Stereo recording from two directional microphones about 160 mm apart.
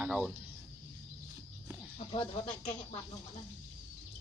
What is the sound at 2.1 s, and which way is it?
Speech, 40° left (ahead or behind).